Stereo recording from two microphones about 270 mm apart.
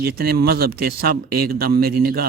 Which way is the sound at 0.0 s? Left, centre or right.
Right.